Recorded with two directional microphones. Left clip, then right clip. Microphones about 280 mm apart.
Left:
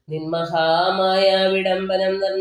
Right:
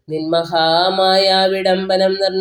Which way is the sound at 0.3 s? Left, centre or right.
Right.